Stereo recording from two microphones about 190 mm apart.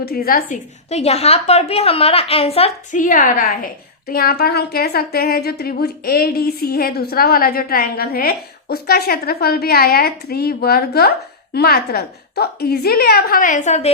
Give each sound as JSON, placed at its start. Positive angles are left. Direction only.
{"t": 0.0, "sound": "a woman's voice", "side_deg": 55}